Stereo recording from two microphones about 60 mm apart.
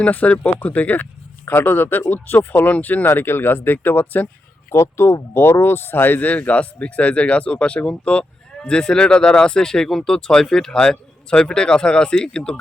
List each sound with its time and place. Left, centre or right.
0.0 s speech: left
4.7 s speech: left; by 12.5 s centre